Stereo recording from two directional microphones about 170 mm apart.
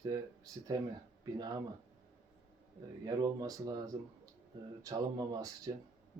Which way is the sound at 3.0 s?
20° right (ahead or behind).